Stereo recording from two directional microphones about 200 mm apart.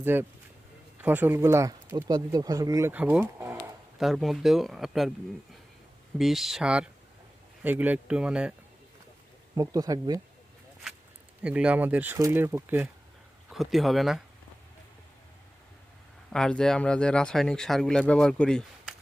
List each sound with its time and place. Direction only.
0.0 s speech: 10° right (ahead or behind)
6.1 s speech: centre (ahead or behind)
9.6 s speech: 20° right (ahead or behind)
11.4 s speech: 5° right (ahead or behind)
13.5 s speech: centre (ahead or behind)
16.3 s speech: 5° left (ahead or behind)